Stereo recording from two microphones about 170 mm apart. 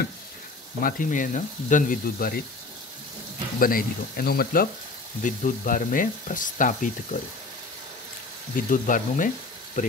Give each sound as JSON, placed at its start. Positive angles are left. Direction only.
{"t": 0.8, "sound": "frying", "side_deg": 50}
{"t": 3.5, "sound": "speech", "side_deg": 55}
{"t": 5.2, "sound": "frying", "side_deg": 50}
{"t": 8.5, "sound": "frying", "side_deg": 50}